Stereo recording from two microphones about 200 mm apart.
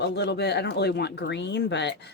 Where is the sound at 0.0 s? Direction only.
60° left (ahead or behind).